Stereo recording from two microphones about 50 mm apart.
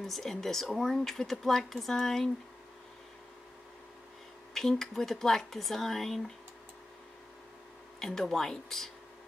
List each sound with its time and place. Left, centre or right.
0.0 s speech: centre
4.6 s speech: centre
8.0 s speech: centre